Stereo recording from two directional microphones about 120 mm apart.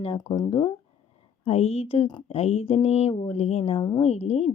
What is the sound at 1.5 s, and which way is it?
Speech, 60° left (ahead or behind).